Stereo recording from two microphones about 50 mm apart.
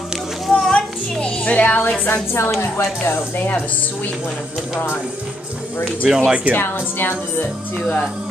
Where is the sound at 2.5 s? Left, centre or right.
Left.